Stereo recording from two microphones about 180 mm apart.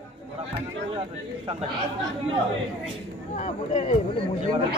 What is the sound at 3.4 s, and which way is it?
Speech, 40° left (ahead or behind).